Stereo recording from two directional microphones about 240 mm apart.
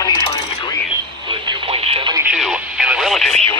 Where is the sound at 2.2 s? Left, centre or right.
Centre.